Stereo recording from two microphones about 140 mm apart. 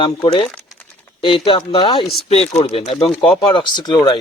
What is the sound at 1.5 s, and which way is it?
Speech, 35° left (ahead or behind).